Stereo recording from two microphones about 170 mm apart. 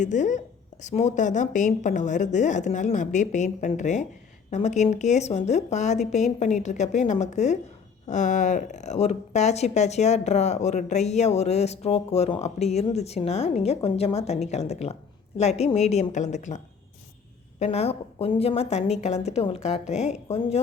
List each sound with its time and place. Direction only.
0.0 s a woman's voice: 45° left (ahead or behind)
17.6 s a woman's voice: 40° left (ahead or behind)